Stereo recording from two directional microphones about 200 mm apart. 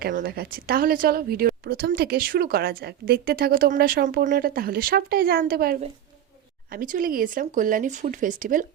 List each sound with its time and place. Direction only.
0.0 s a woman's voice: 50° right (ahead or behind)